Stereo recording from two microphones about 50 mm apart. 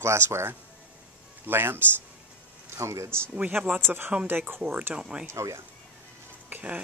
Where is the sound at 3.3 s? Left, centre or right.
Right.